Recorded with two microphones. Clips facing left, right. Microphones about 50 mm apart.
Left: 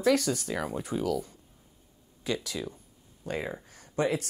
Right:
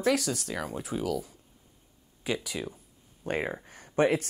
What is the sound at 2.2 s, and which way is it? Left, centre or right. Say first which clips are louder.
Speech: even; centre.